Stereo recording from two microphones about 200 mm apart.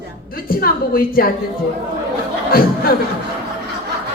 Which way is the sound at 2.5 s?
50° left (ahead or behind).